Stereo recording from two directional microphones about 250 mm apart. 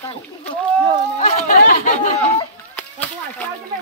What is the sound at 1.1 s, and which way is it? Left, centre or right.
Speech, left.